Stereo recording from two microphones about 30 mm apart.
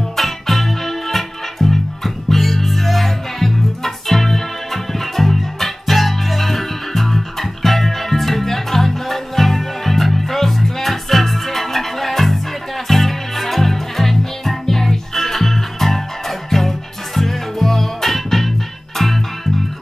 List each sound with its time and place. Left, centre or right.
0.1 s music: centre